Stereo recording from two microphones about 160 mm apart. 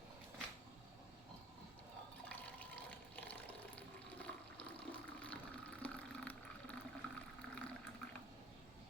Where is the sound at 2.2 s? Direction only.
10° left (ahead or behind).